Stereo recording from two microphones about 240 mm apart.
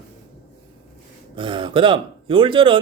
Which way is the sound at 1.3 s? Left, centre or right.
Right.